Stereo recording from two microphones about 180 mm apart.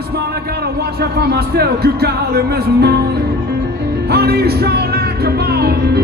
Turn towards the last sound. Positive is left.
turn(degrees=-60)  # may be behind; listen again after turning